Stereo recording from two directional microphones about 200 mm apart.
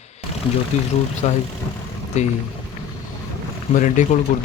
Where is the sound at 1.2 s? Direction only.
30° left (ahead or behind).